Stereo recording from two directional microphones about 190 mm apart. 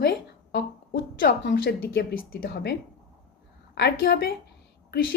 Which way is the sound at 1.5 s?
55° left (ahead or behind).